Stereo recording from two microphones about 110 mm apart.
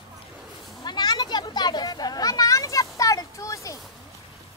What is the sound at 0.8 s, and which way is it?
Children playing, 40° left (ahead or behind).